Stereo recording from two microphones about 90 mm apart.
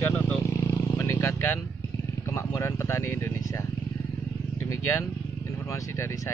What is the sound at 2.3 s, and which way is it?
Speech, 30° left (ahead or behind).